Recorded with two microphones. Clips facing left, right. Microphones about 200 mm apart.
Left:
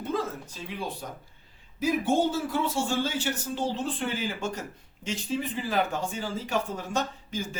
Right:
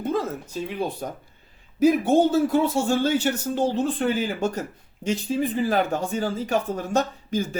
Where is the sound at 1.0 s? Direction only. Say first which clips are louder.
Right 7 dB; 55° right (ahead or behind).